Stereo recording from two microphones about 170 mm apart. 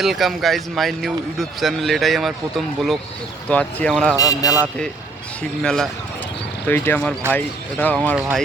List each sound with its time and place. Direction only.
0.0 s speech: centre (ahead or behind)
4.2 s a man's voice: 20° left (ahead or behind)
5.4 s speech: 5° left (ahead or behind)